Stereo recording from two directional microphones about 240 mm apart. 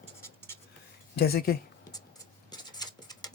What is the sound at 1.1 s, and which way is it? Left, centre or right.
Speech, left.